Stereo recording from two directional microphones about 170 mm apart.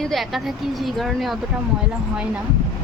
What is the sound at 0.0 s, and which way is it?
Speech, centre (ahead or behind).